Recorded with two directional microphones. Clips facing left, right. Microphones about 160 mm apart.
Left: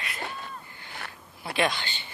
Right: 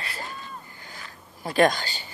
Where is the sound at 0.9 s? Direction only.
65° left (ahead or behind).